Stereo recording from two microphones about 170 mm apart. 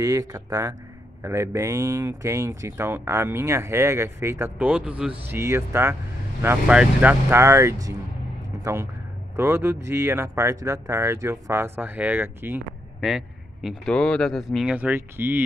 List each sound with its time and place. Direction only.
0.0 s a man's voice: 20° right (ahead or behind)
9.4 s speech: 15° right (ahead or behind)